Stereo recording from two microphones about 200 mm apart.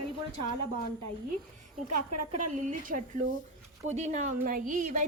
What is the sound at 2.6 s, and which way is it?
A woman's voice, 40° right (ahead or behind).